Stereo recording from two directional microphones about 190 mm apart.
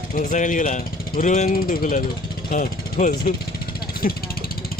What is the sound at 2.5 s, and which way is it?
Vehicle, 45° left (ahead or behind).